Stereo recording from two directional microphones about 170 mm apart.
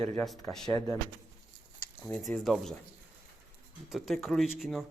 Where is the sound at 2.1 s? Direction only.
5° left (ahead or behind).